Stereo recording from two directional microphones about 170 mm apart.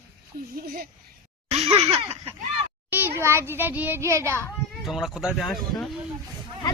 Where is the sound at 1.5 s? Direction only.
35° right (ahead or behind).